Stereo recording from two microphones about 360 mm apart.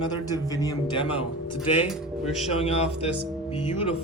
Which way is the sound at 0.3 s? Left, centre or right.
Centre.